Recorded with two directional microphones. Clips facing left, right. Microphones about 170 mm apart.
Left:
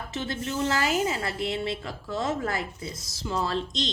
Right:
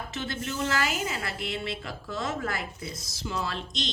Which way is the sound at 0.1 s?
30° left (ahead or behind).